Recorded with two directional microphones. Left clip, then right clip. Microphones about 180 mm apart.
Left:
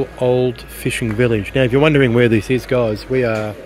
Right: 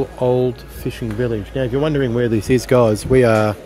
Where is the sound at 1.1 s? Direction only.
15° left (ahead or behind).